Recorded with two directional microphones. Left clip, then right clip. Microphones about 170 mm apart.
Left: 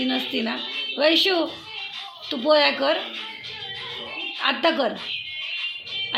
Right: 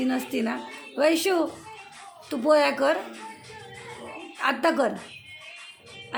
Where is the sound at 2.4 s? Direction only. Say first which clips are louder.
Left 2 dB; 15° right (ahead or behind).